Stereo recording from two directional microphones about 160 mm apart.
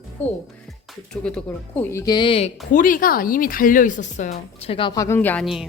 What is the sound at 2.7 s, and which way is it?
Speech, 55° left (ahead or behind).